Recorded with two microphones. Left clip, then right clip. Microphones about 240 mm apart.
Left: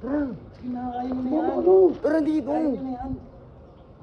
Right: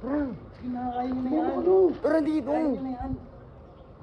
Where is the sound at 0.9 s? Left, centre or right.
Centre.